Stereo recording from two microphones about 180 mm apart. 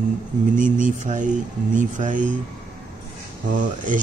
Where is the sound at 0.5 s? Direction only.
45° right (ahead or behind).